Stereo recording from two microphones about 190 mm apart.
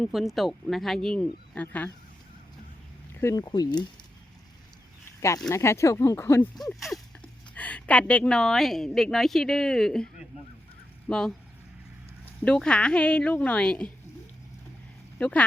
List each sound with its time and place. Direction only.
0.0 s speech: centre (ahead or behind)
3.2 s speech: 15° left (ahead or behind)
5.5 s speech: 15° left (ahead or behind)
6.6 s speech: centre (ahead or behind)
15.2 s speech: 5° left (ahead or behind)